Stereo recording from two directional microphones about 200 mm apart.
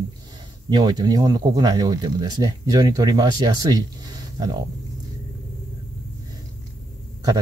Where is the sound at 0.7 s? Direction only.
20° right (ahead or behind).